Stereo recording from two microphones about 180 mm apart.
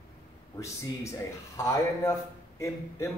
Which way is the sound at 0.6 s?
15° left (ahead or behind).